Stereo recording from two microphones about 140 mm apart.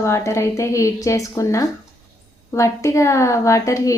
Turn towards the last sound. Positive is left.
turn(degrees=20)  # may be behind; listen again after turning